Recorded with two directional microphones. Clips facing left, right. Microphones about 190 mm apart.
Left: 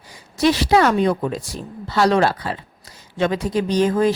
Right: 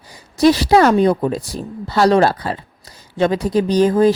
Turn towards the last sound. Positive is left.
turn(degrees=-35)  # may be behind; listen again after turning